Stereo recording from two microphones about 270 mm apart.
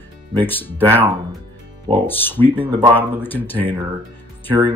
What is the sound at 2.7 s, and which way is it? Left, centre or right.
Speech, centre.